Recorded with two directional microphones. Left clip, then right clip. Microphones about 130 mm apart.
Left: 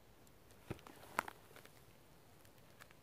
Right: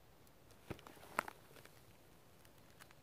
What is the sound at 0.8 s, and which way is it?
Walk, 5° left (ahead or behind).